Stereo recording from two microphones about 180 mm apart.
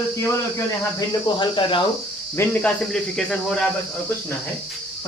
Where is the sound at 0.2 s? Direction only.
15° left (ahead or behind).